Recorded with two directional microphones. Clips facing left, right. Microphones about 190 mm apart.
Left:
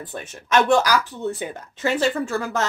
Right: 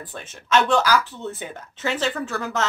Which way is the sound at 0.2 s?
15° left (ahead or behind).